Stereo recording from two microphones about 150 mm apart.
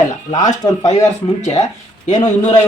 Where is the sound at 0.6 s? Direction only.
25° left (ahead or behind).